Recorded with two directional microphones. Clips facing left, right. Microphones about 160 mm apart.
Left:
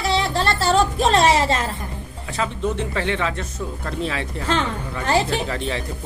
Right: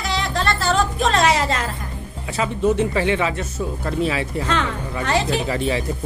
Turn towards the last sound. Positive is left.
turn(degrees=-5)  # may be behind; listen again after turning